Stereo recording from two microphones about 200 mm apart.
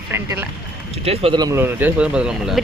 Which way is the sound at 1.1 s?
25° right (ahead or behind).